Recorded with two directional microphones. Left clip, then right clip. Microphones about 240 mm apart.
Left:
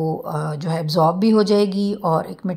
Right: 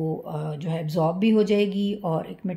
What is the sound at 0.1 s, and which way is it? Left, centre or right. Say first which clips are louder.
Speech: left 6 dB; centre.